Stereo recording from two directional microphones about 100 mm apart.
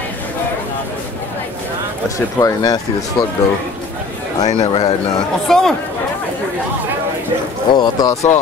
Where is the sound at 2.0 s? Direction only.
35° left (ahead or behind).